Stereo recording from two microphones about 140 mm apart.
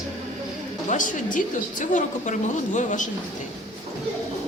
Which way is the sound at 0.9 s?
70° left (ahead or behind).